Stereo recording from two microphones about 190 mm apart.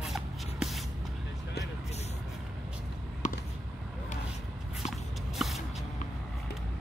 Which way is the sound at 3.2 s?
40° left (ahead or behind).